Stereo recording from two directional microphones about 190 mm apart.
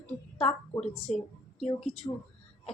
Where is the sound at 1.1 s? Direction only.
35° left (ahead or behind).